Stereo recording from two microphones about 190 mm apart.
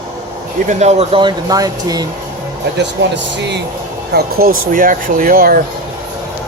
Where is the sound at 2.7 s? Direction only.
65° right (ahead or behind).